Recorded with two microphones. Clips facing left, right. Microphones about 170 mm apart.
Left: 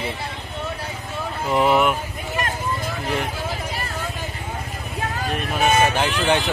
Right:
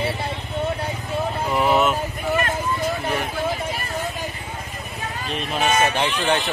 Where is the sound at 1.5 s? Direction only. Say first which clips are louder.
Left 2 dB; 15° left (ahead or behind).